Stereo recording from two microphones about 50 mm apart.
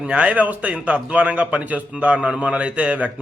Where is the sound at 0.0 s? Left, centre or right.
Right.